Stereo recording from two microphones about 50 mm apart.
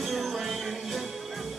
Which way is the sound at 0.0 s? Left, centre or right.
Centre.